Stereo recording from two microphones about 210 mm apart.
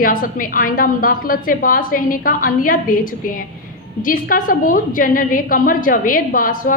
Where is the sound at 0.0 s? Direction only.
40° left (ahead or behind).